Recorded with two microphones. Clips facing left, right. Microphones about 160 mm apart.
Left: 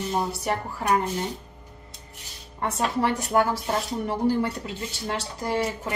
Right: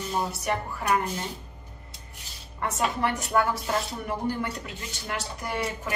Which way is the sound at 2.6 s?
30° left (ahead or behind).